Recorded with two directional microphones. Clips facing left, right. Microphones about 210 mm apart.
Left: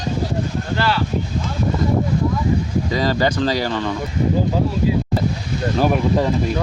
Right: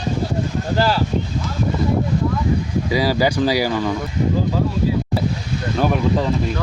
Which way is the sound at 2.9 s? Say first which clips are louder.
Right 2 dB; 10° right (ahead or behind).